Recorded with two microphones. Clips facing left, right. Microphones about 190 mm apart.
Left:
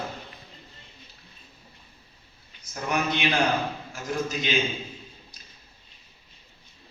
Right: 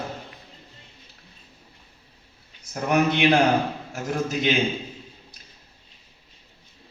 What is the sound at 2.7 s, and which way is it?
A man's voice, 60° right (ahead or behind).